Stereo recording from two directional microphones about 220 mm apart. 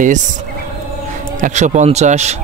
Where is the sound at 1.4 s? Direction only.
30° right (ahead or behind).